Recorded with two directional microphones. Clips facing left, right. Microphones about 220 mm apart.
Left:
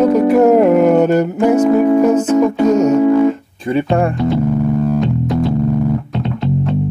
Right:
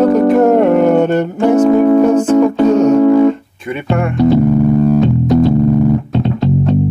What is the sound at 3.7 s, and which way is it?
Speech, 30° left (ahead or behind).